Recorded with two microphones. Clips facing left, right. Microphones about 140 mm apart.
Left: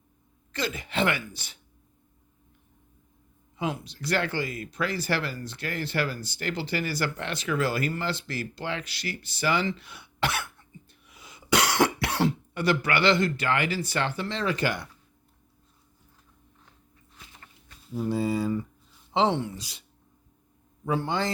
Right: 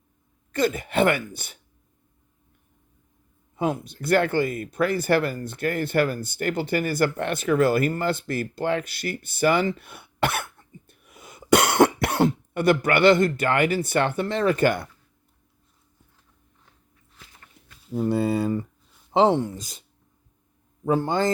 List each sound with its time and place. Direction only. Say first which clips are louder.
0.5 s speech: right 7 dB; 50° right (ahead or behind)
3.5 s speech: right 6 dB; 50° right (ahead or behind)
17.9 s speech: right 4 dB; 60° right (ahead or behind)
19.1 s speech: right 5 dB; 45° right (ahead or behind)
20.8 s speech: right 5 dB; 45° right (ahead or behind)